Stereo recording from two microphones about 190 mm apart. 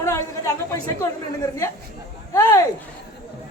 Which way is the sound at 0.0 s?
15° left (ahead or behind).